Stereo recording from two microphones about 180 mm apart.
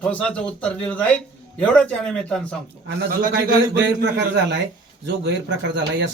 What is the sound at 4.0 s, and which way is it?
A man's voice, 60° right (ahead or behind).